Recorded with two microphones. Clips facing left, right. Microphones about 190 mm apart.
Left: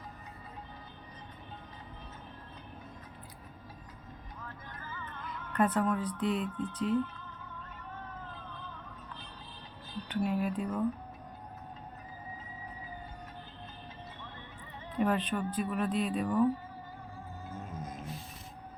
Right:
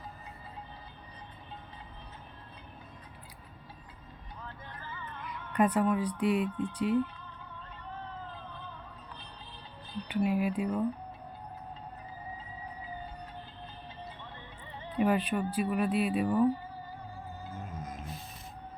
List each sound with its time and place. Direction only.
4.4 s music: 30° right (ahead or behind)
5.5 s speech: 10° right (ahead or behind)
10.1 s speech: 10° right (ahead or behind)
14.9 s speech: 10° right (ahead or behind)
16.2 s speech: 30° right (ahead or behind)